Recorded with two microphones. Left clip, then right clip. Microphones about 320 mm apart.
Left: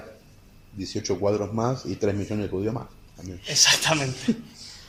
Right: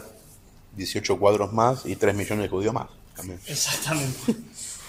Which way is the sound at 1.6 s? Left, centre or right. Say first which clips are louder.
Right 5 dB; right.